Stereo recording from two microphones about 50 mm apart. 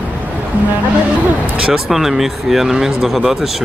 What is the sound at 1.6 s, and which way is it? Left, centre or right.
Speech, centre.